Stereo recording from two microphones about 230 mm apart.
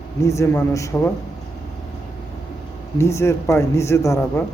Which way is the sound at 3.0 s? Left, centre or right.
Centre.